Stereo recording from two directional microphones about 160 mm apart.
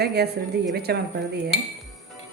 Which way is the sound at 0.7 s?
80° right.